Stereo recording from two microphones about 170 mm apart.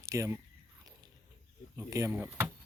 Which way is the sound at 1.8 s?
15° right (ahead or behind).